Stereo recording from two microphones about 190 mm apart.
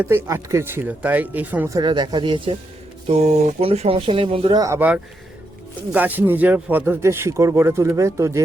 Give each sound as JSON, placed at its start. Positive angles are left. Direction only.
{"t": 0.0, "sound": "speech", "side_deg": -10}
{"t": 4.6, "sound": "speech", "side_deg": -10}